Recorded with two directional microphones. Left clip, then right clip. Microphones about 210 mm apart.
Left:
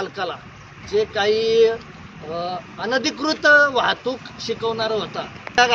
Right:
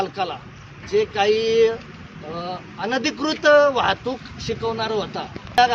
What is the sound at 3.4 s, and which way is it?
Speech, 35° right (ahead or behind).